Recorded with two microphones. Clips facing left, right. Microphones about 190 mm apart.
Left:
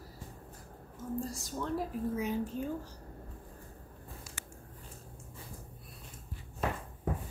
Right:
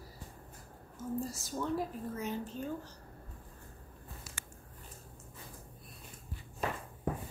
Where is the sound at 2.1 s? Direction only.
10° left (ahead or behind).